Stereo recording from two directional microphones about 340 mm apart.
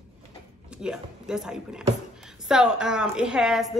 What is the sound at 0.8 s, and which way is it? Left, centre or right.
Speech, centre.